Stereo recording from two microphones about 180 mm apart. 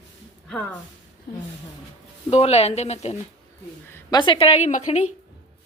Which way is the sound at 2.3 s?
35° left (ahead or behind).